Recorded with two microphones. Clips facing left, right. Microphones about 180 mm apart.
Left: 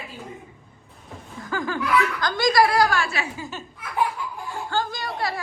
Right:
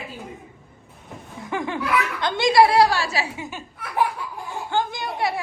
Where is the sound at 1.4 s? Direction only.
25° right (ahead or behind).